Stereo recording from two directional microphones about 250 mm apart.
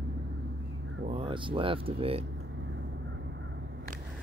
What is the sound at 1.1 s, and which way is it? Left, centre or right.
Speech, right.